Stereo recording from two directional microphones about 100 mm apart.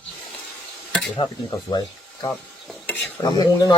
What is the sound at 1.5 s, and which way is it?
Speech, 40° left (ahead or behind).